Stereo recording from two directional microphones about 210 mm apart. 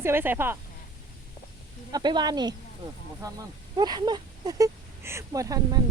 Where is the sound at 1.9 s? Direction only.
20° right (ahead or behind).